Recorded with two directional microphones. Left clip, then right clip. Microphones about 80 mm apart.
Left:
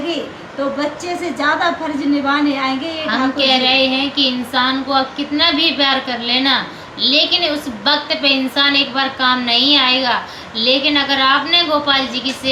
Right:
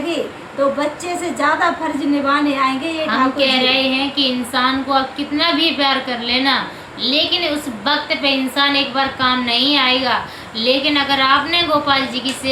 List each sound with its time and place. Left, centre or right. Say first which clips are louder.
1.4 s a woman's voice: even; right
3.1 s a woman's voice: left 1 dB; left